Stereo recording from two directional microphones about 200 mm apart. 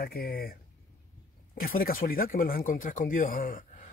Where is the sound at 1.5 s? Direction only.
45° left (ahead or behind).